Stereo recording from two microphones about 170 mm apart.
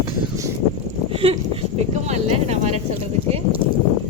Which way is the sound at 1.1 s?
35° right (ahead or behind).